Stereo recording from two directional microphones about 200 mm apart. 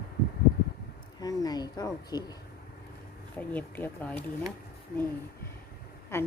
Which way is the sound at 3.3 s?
10° left (ahead or behind).